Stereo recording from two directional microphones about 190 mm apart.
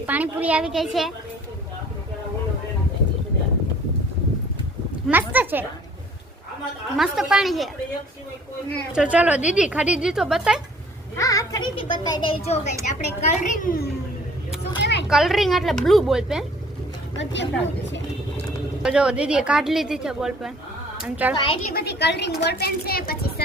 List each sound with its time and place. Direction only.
0.0 s speech: 10° right (ahead or behind)
5.3 s speech: 10° right (ahead or behind)
6.9 s a woman's voice: centre (ahead or behind)
8.9 s a woman's voice: 5° right (ahead or behind)
11.2 s a child's voice: 20° left (ahead or behind); by 13.9 s 50° left (ahead or behind)
14.8 s a sound: 65° left (ahead or behind)
15.1 s a woman's voice: centre (ahead or behind)
17.2 s speech: 70° left (ahead or behind)
18.8 s a woman's voice: 5° right (ahead or behind)
21.3 s a child's voice: 25° left (ahead or behind)
21.7 s a child's voice: 55° left (ahead or behind)